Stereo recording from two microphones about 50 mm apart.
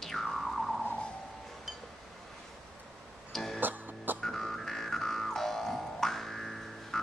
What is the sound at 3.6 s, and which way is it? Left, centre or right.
Music, right.